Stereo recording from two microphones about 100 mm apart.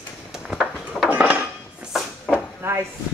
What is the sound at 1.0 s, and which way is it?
Dishes, 10° right (ahead or behind).